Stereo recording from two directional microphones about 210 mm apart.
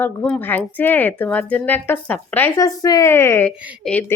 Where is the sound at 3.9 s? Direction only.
5° left (ahead or behind).